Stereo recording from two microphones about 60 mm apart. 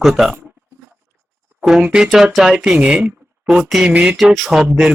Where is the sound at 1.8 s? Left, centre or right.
Centre.